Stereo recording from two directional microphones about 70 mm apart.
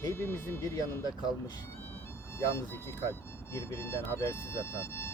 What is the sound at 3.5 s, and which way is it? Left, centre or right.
Speech, left.